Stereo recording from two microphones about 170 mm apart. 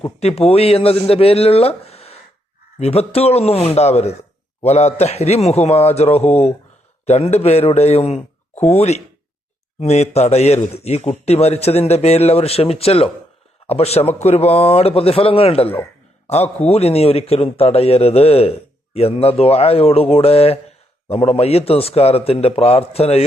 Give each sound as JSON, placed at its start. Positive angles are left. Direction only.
{"t": 0.0, "sound": "speech", "side_deg": 35}
{"t": 15.7, "sound": "a sound", "side_deg": 15}
{"t": 16.6, "sound": "speech", "side_deg": 35}